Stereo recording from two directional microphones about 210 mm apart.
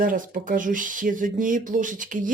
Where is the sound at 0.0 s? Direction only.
40° right (ahead or behind).